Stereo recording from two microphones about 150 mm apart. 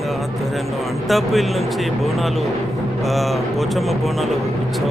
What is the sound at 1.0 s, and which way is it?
Speech, centre (ahead or behind).